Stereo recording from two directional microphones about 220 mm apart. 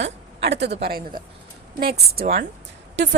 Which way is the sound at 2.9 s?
55° right (ahead or behind).